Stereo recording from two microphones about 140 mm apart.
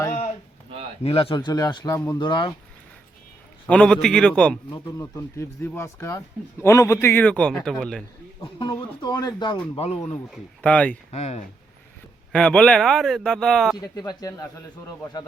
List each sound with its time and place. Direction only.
1.0 s speech: 40° left (ahead or behind)
3.7 s a man's voice: 10° left (ahead or behind)
4.7 s speech: 20° left (ahead or behind); by 8.0 s 5° left (ahead or behind)
8.7 s speech: 30° left (ahead or behind)
9.7 s speech: 45° left (ahead or behind)
10.3 s a man's voice: 10° left (ahead or behind)
11.1 s speech: 50° left (ahead or behind)
12.3 s speech: 5° left (ahead or behind)
13.7 s speech: 25° left (ahead or behind)